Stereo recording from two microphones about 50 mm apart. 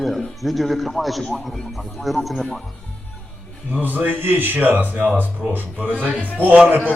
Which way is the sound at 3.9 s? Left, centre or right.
Right.